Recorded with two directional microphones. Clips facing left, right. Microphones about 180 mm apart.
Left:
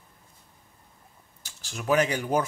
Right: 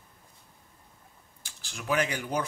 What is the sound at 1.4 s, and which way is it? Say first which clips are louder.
Speech: left 5 dB; 40° left (ahead or behind).